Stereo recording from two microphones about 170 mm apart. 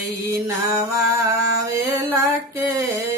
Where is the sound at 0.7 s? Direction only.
20° right (ahead or behind).